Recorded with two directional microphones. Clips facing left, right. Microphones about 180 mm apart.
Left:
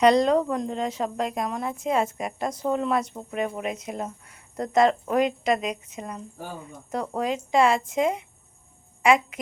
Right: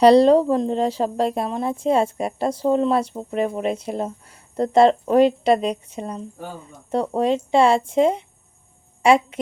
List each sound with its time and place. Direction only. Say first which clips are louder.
0.0 s a woman's voice: right 6 dB; 30° right (ahead or behind)